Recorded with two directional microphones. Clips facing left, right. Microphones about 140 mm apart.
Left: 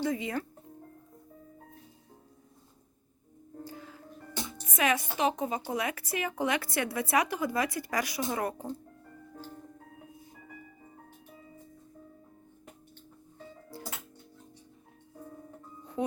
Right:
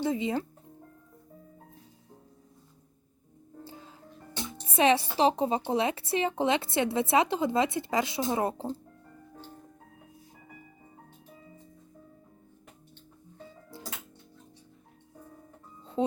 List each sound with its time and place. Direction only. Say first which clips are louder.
0.0 s a woman's voice: right 3 dB; 25° right (ahead or behind)
3.6 s music: left 3 dB; 25° right (ahead or behind)
4.6 s a woman's voice: right 5 dB; 30° right (ahead or behind)
15.8 s music: right 4 dB; 25° right (ahead or behind)